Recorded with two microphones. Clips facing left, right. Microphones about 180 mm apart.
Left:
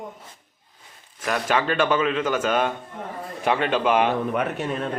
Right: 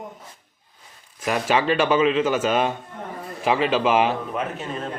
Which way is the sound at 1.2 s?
10° right (ahead or behind).